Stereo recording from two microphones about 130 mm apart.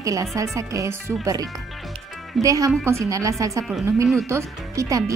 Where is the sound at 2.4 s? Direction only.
25° right (ahead or behind).